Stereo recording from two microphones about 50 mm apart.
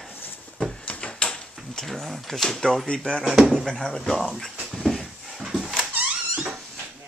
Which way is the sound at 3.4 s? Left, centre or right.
Centre.